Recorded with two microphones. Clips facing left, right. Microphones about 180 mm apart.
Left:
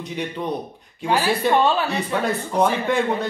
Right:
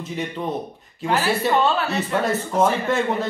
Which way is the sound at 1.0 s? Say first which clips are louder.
Left 1 dB; 15° left (ahead or behind).